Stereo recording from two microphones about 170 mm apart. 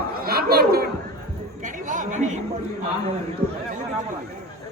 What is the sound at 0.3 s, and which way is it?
Chatter, 65° right (ahead or behind).